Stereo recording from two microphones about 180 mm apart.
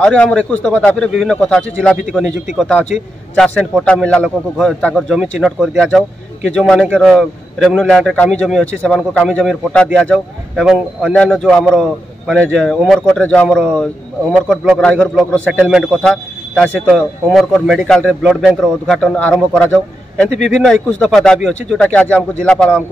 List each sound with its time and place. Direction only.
0.0 s speech: 5° left (ahead or behind)